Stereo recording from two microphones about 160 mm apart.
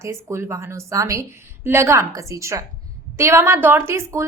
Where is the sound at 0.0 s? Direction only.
15° right (ahead or behind).